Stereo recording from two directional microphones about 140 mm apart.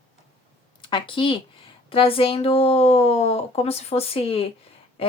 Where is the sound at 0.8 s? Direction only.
35° left (ahead or behind).